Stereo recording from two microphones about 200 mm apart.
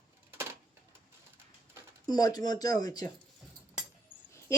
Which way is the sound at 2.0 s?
20° left (ahead or behind).